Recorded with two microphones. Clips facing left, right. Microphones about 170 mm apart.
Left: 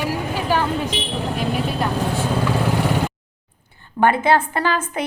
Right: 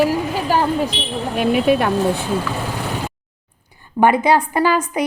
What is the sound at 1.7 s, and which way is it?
Speech, 65° right (ahead or behind).